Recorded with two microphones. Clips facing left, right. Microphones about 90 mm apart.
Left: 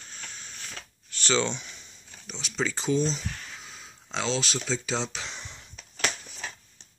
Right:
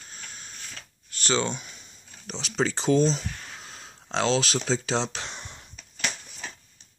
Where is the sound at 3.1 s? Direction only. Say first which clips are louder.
Right 1 dB; 50° right (ahead or behind); by 4.4 s 70° right (ahead or behind).